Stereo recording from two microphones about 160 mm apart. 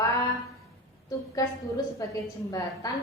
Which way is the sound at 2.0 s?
20° left (ahead or behind).